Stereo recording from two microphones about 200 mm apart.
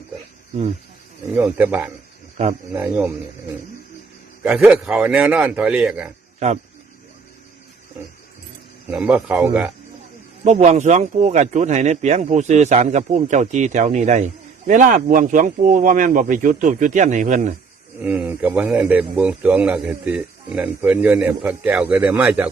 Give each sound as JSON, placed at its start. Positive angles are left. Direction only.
{"t": 1.4, "sound": "a man's voice", "side_deg": -10}
{"t": 4.4, "sound": "a man's voice", "side_deg": 0}
{"t": 6.4, "sound": "speech", "side_deg": -35}
{"t": 8.9, "sound": "a man's voice", "side_deg": -5}
{"t": 10.4, "sound": "speech", "side_deg": -35}
{"t": 18.0, "sound": "a man's voice", "side_deg": -10}